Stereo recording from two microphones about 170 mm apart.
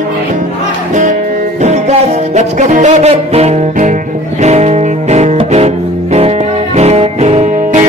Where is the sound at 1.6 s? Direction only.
40° right (ahead or behind).